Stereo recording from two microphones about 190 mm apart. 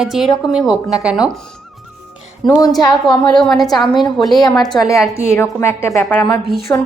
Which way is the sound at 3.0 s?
Centre (ahead or behind).